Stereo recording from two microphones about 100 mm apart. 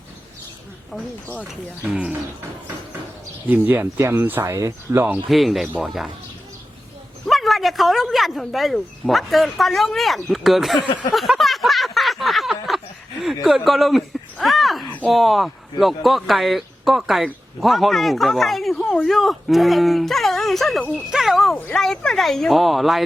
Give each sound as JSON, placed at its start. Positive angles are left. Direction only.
{"t": 1.5, "sound": "speech", "side_deg": -10}
{"t": 3.4, "sound": "speech", "side_deg": -20}
{"t": 5.3, "sound": "speech", "side_deg": 0}
{"t": 7.3, "sound": "speech", "side_deg": 0}
{"t": 11.1, "sound": "a sound", "side_deg": 0}
{"t": 14.4, "sound": "speech", "side_deg": 0}